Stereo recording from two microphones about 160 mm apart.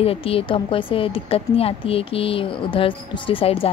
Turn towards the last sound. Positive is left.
turn(degrees=35)  # may be behind; listen again after turning